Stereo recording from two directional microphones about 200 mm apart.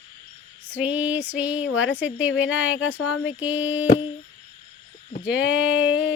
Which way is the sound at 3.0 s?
90° left.